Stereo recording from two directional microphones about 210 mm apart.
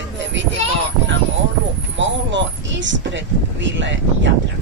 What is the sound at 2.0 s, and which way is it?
Speech, 60° right (ahead or behind).